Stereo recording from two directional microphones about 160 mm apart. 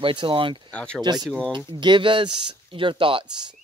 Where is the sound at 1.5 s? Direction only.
30° right (ahead or behind).